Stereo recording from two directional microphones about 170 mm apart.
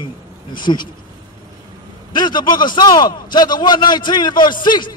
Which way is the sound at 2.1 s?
25° left (ahead or behind).